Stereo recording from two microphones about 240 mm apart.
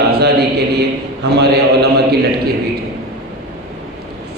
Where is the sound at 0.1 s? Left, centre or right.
Right.